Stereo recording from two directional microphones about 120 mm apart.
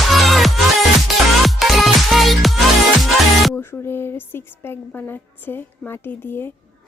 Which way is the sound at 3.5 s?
20° left (ahead or behind).